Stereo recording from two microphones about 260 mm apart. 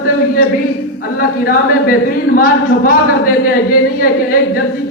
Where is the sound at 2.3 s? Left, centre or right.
Left.